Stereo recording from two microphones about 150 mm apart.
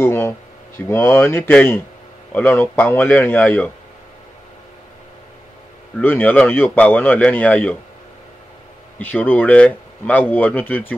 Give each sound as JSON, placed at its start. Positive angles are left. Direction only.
{"t": 0.0, "sound": "speech", "side_deg": 15}
{"t": 5.9, "sound": "speech", "side_deg": 10}
{"t": 8.9, "sound": "speech", "side_deg": 10}